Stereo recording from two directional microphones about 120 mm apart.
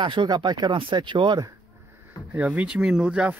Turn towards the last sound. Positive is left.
turn(degrees=-10)  # may be behind; listen again after turning